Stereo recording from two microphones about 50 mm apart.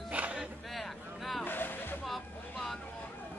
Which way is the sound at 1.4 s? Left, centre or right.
Left.